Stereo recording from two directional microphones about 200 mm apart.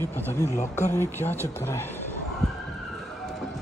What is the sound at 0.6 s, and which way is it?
Speech, 35° left (ahead or behind).